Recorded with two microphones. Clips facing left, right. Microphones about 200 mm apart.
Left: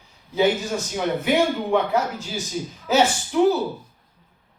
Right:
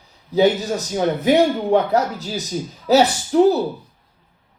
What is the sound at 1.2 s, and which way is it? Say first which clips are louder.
Speech: right 6 dB; 40° right (ahead or behind).